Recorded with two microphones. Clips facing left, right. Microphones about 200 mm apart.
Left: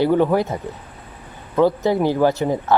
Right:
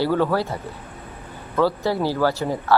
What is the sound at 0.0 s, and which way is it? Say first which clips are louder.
Speech: left 4 dB; 20° left (ahead or behind).